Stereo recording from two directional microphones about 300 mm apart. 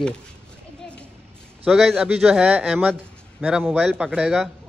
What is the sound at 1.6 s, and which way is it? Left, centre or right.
A man's voice, centre.